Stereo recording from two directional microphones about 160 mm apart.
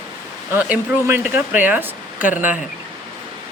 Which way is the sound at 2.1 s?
55° left (ahead or behind).